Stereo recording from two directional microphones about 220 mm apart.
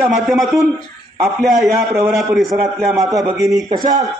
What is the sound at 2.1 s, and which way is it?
Speech, centre (ahead or behind).